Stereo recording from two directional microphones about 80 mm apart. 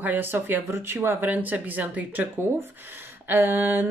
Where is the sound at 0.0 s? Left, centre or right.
Right.